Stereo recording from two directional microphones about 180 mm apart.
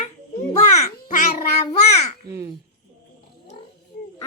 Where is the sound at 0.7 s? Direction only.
40° left (ahead or behind).